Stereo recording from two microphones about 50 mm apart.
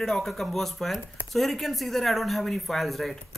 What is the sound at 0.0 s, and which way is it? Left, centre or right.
Speech, centre.